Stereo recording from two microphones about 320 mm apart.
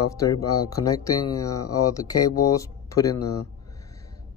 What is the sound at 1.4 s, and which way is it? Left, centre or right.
Speech, centre.